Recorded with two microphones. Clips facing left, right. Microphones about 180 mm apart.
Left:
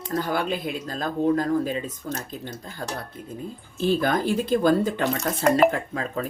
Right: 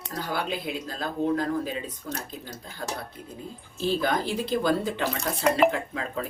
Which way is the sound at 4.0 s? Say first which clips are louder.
Left 4 dB; 50° left (ahead or behind).